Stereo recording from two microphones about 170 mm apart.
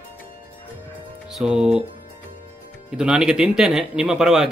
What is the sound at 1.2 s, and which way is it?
Speech, centre (ahead or behind).